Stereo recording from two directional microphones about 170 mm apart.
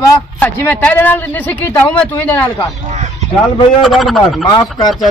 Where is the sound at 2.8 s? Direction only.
40° right (ahead or behind).